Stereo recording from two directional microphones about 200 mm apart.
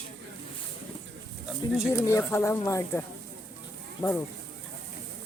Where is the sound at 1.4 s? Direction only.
5° right (ahead or behind).